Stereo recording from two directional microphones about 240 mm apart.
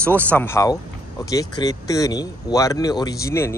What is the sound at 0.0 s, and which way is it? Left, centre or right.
Speech, centre.